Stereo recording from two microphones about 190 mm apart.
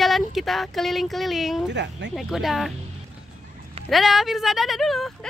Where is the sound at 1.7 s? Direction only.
65° right (ahead or behind).